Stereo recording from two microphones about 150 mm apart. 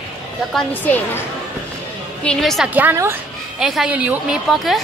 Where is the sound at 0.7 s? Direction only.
15° left (ahead or behind).